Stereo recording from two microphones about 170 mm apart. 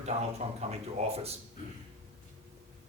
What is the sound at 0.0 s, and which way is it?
Speech, 40° right (ahead or behind).